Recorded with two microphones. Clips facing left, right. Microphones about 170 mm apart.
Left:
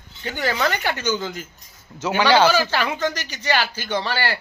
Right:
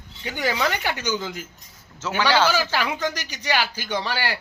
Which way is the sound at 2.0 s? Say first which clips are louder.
Left 4 dB; 15° left (ahead or behind).